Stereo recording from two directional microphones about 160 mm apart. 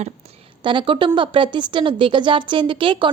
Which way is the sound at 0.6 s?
30° right (ahead or behind).